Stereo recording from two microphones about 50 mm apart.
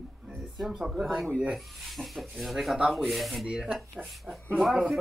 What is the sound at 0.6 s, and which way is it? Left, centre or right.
Speech, centre.